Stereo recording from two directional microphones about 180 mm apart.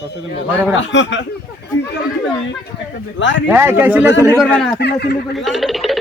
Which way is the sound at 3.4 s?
10° right (ahead or behind).